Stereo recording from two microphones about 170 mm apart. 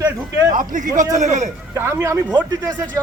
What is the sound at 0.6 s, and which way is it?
Speech, 50° right (ahead or behind).